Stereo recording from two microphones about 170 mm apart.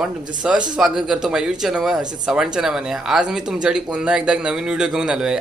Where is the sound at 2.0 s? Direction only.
25° right (ahead or behind).